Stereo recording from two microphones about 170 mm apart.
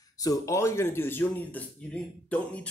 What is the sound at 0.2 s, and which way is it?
Speech, 20° left (ahead or behind).